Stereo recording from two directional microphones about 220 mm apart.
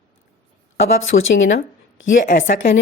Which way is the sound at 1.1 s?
40° left (ahead or behind).